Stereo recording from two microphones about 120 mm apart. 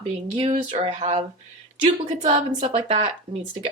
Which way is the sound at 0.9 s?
75° right (ahead or behind).